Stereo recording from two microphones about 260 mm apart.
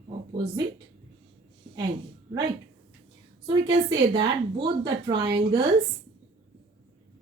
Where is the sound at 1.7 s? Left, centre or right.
Centre.